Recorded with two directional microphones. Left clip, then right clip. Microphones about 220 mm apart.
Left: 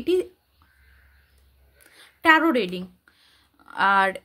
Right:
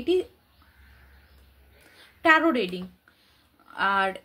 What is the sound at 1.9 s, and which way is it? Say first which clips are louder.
A woman's voice: left 2 dB; 50° left (ahead or behind).